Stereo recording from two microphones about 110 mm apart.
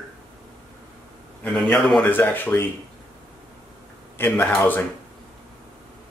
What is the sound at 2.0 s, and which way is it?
Speech, 15° left (ahead or behind).